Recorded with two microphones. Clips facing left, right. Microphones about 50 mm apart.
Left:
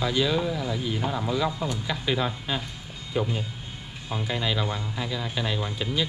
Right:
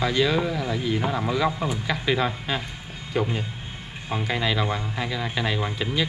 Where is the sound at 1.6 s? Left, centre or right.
Centre.